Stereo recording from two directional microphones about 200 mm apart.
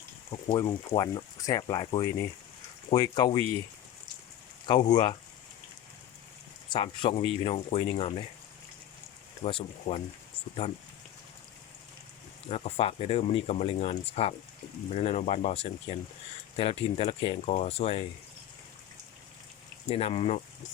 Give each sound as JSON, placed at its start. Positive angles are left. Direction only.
{"t": 0.3, "sound": "speech", "side_deg": 20}
{"t": 4.6, "sound": "speech", "side_deg": 20}
{"t": 6.7, "sound": "speech", "side_deg": 25}
{"t": 9.4, "sound": "speech", "side_deg": 30}
{"t": 12.5, "sound": "speech", "side_deg": 30}
{"t": 19.9, "sound": "speech", "side_deg": 30}